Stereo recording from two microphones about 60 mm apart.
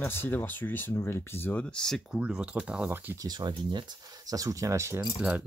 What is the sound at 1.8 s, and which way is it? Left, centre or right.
Speech, centre.